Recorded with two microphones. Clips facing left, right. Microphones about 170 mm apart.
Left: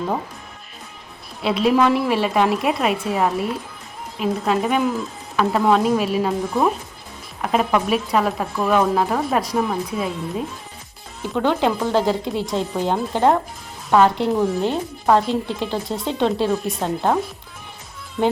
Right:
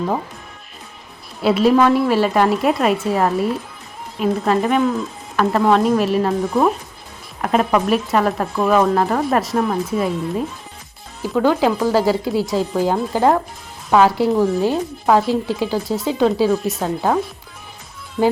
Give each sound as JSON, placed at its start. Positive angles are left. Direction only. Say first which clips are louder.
{"t": 1.4, "sound": "speech", "louder": "right 3 dB", "side_deg": 0}
{"t": 18.2, "sound": "speech", "louder": "right 3 dB", "side_deg": 0}